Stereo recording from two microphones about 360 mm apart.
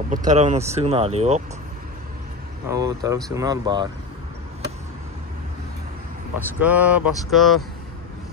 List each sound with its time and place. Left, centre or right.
0.1 s speech: right
2.7 s speech: centre
3.2 s speech: centre
3.4 s speech: centre
6.3 s speech: centre